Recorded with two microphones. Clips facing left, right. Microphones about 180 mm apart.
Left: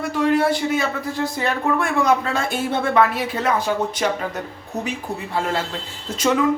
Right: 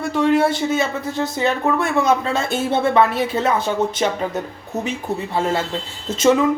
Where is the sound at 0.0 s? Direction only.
25° right (ahead or behind).